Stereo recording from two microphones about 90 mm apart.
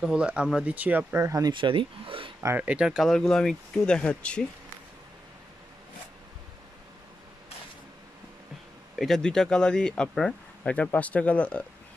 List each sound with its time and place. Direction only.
0.0 s speech: 10° right (ahead or behind)
1.2 s speech: 40° right (ahead or behind)
1.5 s speech: 65° right (ahead or behind)
2.5 s speech: 15° right (ahead or behind)
3.1 s speech: 5° left (ahead or behind)
8.9 s speech: 5° left (ahead or behind)